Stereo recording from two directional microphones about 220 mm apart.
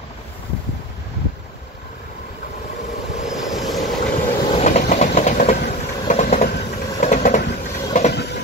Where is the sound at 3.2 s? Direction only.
Centre (ahead or behind).